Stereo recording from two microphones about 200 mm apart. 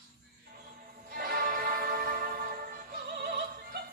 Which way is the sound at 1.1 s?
45° right (ahead or behind).